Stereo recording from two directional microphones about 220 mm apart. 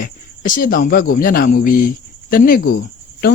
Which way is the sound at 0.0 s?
40° left (ahead or behind).